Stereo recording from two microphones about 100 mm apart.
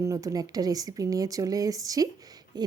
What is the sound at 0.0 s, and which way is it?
Speech, 35° right (ahead or behind).